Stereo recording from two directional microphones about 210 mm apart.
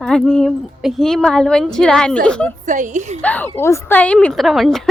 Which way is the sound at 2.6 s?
35° right (ahead or behind).